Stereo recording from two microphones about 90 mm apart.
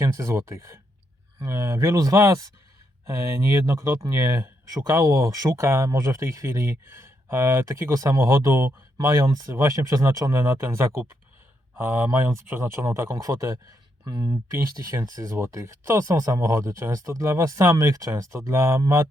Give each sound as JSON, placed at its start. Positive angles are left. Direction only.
{"t": 0.0, "sound": "speech", "side_deg": -30}
{"t": 14.3, "sound": "speech", "side_deg": -30}